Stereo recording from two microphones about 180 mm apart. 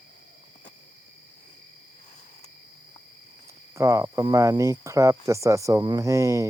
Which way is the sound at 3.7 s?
15° right (ahead or behind).